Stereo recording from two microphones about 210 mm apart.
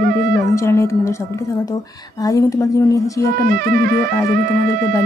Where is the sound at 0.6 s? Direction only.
15° left (ahead or behind).